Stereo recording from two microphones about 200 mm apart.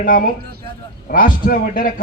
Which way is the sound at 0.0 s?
45° left (ahead or behind).